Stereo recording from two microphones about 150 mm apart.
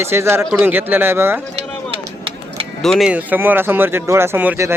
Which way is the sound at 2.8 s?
Centre (ahead or behind).